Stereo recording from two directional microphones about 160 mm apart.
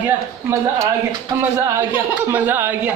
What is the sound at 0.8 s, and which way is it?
Speech, 25° right (ahead or behind).